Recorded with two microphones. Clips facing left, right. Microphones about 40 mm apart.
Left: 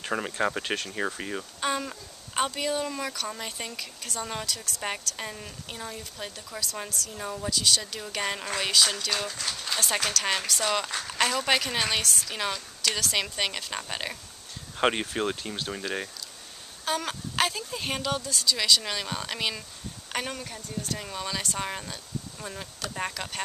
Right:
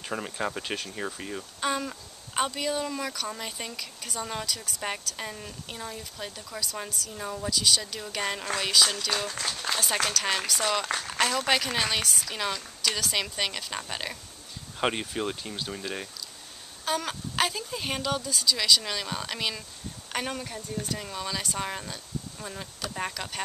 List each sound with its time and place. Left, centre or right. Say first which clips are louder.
0.0 s a woman's voice: left 4 dB; centre
1.6 s a woman's voice: right 1 dB; centre
16.8 s a woman's voice: even; centre